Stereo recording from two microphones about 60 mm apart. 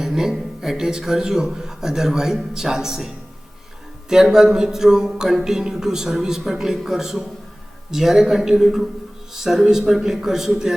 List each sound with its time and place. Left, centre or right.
0.0 s a man's voice: centre
4.1 s a man's voice: centre